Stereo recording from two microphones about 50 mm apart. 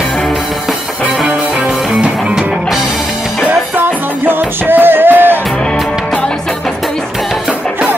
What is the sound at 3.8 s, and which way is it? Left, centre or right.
Music, right.